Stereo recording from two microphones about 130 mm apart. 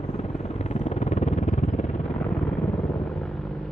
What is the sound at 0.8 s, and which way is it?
Vehicle, 60° left (ahead or behind).